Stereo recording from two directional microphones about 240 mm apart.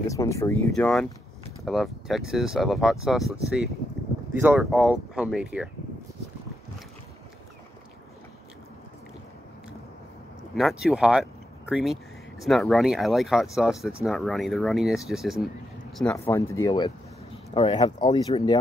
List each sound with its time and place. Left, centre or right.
0.1 s speech: centre
4.3 s speech: centre
10.5 s speech: centre